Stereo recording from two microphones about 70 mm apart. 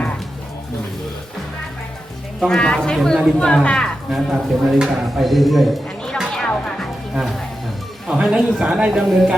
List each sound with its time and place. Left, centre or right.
2.4 s speech: centre
3.3 s speech: centre
4.1 s speech: centre
7.1 s speech: centre